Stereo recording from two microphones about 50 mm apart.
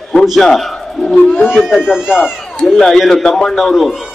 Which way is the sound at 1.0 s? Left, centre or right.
Left.